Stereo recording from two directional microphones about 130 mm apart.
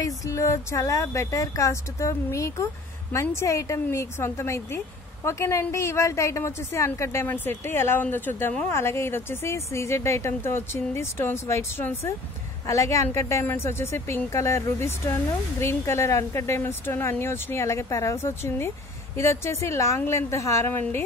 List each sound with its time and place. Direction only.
0.0 s speech: 25° left (ahead or behind)